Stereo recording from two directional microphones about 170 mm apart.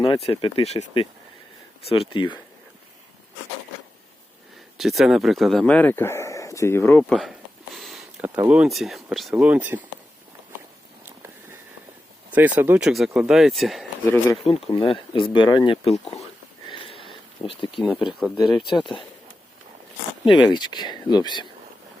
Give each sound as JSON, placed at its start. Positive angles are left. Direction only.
{"t": 0.0, "sound": "speech", "side_deg": 30}
{"t": 4.8, "sound": "speech", "side_deg": 0}
{"t": 7.1, "sound": "a sound", "side_deg": 0}
{"t": 8.4, "sound": "speech", "side_deg": -5}
{"t": 12.3, "sound": "speech", "side_deg": -10}
{"t": 14.4, "sound": "speech", "side_deg": 30}
{"t": 16.6, "sound": "a sound", "side_deg": 30}
{"t": 17.7, "sound": "speech", "side_deg": -5}
{"t": 18.7, "sound": "speech", "side_deg": 25}
{"t": 20.2, "sound": "speech", "side_deg": 25}